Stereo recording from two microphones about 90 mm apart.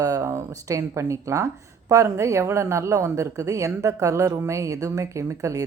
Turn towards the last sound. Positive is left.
turn(degrees=-35)  # may be behind; listen again after turning